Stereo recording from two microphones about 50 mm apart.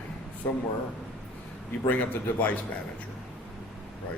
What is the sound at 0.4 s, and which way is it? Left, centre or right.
Speech, left.